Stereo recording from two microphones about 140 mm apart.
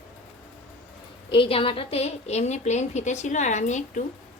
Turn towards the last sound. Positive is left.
turn(degrees=60)  # may be behind; listen again after turning